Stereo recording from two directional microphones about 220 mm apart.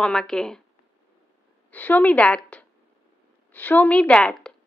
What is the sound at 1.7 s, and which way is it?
A woman's voice, 5° left (ahead or behind).